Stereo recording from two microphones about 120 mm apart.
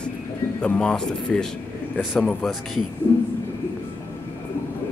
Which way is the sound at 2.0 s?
5° right (ahead or behind).